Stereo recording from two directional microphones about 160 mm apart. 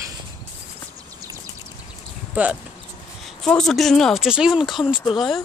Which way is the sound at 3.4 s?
5° left (ahead or behind).